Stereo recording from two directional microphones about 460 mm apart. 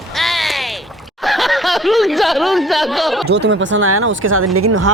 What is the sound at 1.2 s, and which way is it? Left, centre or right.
Speech, centre.